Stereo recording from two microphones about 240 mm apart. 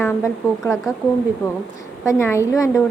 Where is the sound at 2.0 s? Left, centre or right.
Centre.